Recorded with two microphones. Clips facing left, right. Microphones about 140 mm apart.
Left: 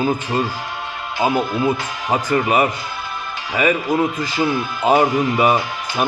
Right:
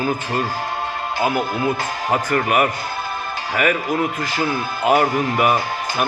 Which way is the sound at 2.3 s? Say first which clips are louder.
Left 3 dB; 20° left (ahead or behind).